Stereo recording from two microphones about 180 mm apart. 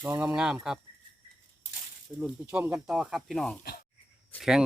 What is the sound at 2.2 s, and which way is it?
Speech, 5° right (ahead or behind).